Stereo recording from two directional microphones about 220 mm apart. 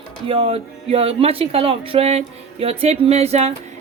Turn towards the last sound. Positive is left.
turn(degrees=-30)  # may be behind; listen again after turning